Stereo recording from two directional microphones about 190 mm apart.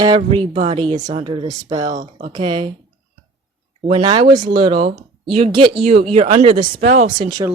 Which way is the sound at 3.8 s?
30° right (ahead or behind).